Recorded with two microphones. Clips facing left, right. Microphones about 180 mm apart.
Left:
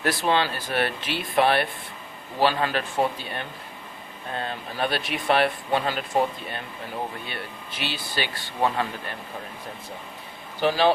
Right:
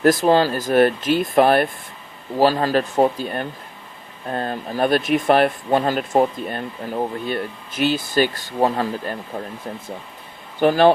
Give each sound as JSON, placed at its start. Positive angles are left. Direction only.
{"t": 0.0, "sound": "speech", "side_deg": -45}
{"t": 10.6, "sound": "speech", "side_deg": -50}